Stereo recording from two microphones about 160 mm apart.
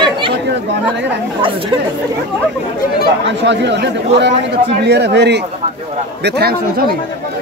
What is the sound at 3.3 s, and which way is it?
A man's voice, 90° right.